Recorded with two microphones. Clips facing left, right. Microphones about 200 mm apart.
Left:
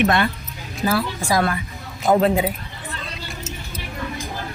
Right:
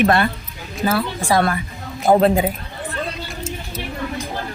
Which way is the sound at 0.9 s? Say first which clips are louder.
Right 2 dB; 30° right (ahead or behind).